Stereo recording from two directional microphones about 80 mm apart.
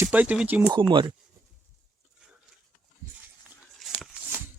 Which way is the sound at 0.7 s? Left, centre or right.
Right.